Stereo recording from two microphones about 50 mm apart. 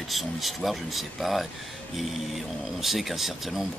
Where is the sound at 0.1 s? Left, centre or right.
Centre.